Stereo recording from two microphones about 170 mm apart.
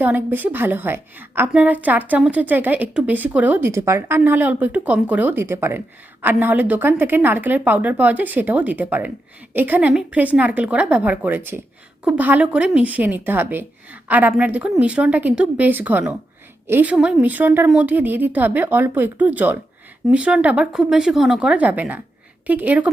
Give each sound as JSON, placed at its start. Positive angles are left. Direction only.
{"t": 0.0, "sound": "a woman's voice", "side_deg": -10}